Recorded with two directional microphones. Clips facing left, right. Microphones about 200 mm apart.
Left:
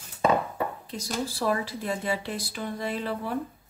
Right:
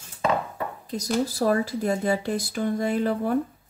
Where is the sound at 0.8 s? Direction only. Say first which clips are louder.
Right 6 dB; 40° right (ahead or behind).